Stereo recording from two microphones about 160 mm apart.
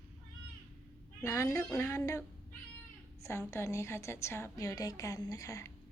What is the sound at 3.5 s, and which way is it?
A woman's voice, 20° left (ahead or behind).